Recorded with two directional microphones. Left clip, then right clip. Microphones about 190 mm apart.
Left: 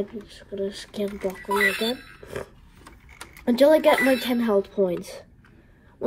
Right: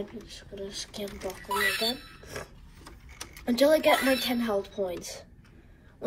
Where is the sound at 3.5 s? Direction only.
50° left (ahead or behind).